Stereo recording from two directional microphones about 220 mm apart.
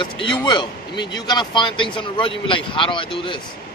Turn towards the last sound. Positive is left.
turn(degrees=20)  # may be behind; listen again after turning